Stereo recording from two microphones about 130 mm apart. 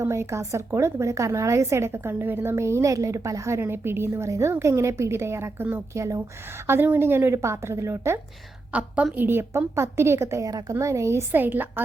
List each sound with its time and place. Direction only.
0.0 s a woman's voice: 20° right (ahead or behind)
8.7 s a woman's voice: 10° right (ahead or behind)